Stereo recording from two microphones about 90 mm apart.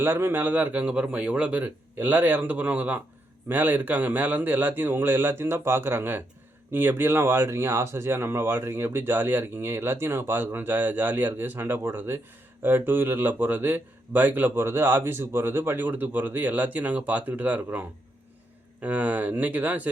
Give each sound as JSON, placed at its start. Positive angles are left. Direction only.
{"t": 0.0, "sound": "speech", "side_deg": -25}